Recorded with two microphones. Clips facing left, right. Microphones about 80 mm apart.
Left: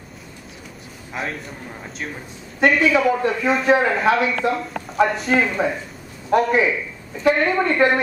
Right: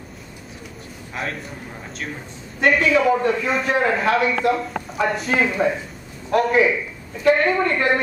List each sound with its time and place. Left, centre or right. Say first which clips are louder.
1.2 s a man's voice: even; centre
2.6 s a man's voice: left 1 dB; centre